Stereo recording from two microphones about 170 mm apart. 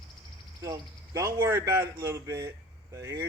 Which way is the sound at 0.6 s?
20° right (ahead or behind).